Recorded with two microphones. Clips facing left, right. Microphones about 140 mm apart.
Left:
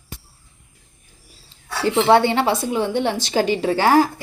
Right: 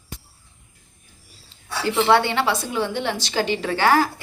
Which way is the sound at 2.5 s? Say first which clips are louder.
Left 4 dB; 20° left (ahead or behind).